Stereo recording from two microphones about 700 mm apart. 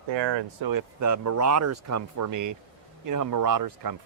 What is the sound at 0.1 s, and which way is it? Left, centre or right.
Speech, right.